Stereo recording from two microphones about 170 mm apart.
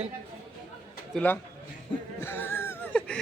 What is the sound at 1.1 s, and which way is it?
Speech, 10° left (ahead or behind).